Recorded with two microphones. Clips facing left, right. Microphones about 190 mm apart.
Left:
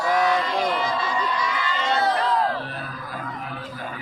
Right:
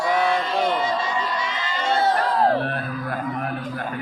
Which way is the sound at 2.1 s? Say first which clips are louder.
Right 3 dB; 45° right (ahead or behind).